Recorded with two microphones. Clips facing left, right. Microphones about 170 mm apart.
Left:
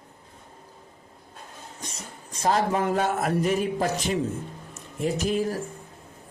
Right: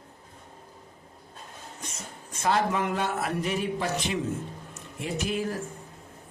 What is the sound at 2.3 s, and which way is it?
Speech, 35° left (ahead or behind).